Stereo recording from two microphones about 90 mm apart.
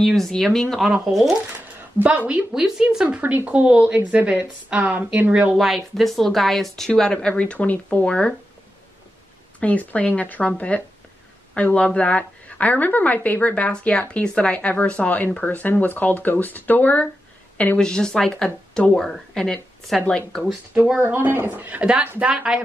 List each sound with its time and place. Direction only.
0.0 s speech: centre (ahead or behind)
2.0 s speech: 15° right (ahead or behind)
3.2 s speech: 15° right (ahead or behind)
5.6 s a woman's voice: centre (ahead or behind)
9.6 s a woman's voice: 15° left (ahead or behind)
21.0 s speech: 25° right (ahead or behind)